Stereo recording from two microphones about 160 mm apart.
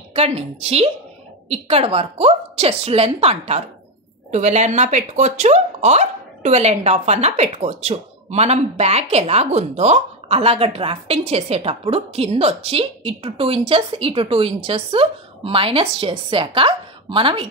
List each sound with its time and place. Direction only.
0.1 s speech: 40° right (ahead or behind)